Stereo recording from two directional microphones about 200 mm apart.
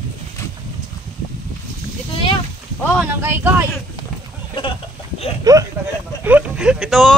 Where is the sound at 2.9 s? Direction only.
10° right (ahead or behind).